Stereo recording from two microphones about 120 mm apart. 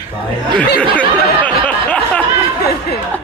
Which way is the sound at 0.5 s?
10° left (ahead or behind).